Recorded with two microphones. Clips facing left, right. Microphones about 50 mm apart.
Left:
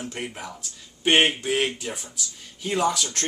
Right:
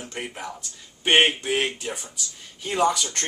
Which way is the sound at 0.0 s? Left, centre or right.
Centre.